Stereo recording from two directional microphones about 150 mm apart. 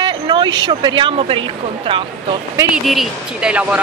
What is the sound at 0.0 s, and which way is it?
Speech, 30° right (ahead or behind).